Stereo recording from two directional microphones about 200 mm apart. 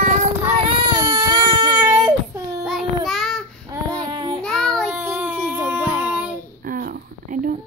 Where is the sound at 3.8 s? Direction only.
15° right (ahead or behind).